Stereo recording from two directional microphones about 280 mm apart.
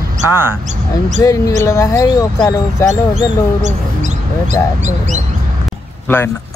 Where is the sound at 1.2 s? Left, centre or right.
Centre.